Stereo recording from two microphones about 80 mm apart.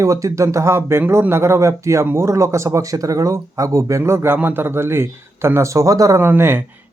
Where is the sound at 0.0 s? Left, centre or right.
Right.